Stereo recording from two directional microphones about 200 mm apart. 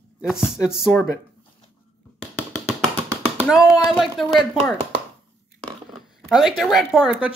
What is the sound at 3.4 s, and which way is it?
Speech, centre (ahead or behind).